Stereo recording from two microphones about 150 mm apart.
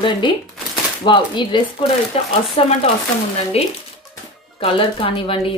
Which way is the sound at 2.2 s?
45° left (ahead or behind).